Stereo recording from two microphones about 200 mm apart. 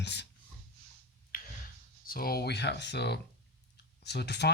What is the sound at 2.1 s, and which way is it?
Speech, 50° left (ahead or behind).